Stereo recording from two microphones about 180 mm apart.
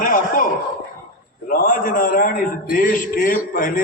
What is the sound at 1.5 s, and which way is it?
A man's voice, 50° left (ahead or behind).